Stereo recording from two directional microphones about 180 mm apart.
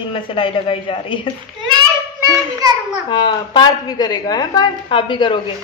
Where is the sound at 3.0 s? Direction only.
25° left (ahead or behind).